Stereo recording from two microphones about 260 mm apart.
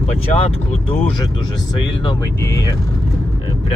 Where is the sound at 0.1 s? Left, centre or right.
Left.